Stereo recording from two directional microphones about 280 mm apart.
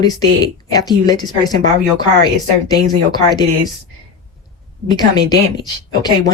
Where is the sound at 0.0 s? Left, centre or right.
Centre.